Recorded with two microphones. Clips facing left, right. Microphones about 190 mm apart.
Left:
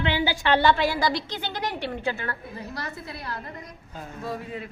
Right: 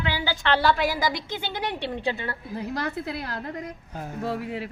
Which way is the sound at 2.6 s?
65° right (ahead or behind).